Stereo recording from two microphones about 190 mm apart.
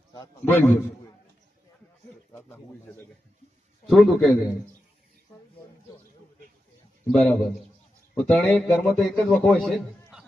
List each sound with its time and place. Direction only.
0.4 s speech: 10° left (ahead or behind)
2.3 s speech: 10° left (ahead or behind)
3.8 s a man's voice: centre (ahead or behind)
7.1 s a man's voice: centre (ahead or behind)